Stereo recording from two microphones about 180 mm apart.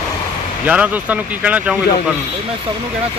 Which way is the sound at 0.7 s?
10° right (ahead or behind).